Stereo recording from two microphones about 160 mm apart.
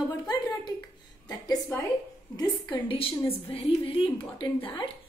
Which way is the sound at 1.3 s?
25° left (ahead or behind).